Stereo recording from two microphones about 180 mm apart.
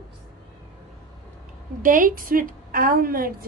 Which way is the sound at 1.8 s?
50° right (ahead or behind).